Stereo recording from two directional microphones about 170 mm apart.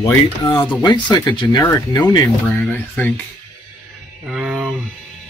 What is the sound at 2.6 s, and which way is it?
Speech, 10° left (ahead or behind).